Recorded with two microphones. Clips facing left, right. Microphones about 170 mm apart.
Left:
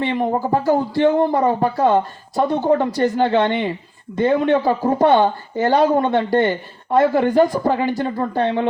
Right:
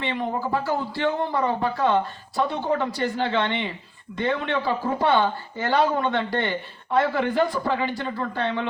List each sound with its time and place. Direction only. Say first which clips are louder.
0.0 s speech: left 7 dB; 45° left (ahead or behind)